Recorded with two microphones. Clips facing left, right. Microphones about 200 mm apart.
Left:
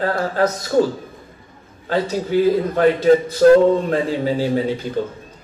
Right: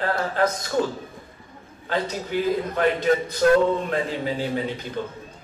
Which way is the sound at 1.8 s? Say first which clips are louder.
Left 6 dB; 40° left (ahead or behind).